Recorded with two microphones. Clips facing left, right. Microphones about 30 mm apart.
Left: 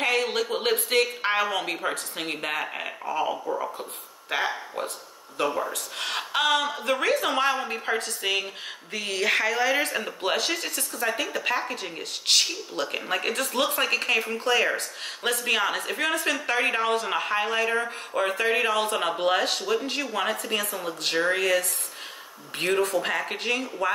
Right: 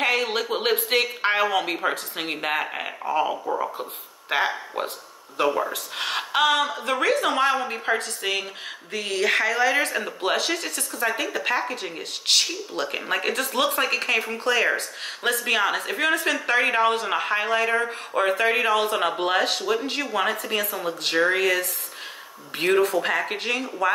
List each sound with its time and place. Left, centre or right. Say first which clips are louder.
0.0 s a sound: right 2 dB; right
0.4 s speech: right 2 dB; centre
4.3 s a woman's voice: right 3 dB; right
22.6 s speech: right 4 dB; centre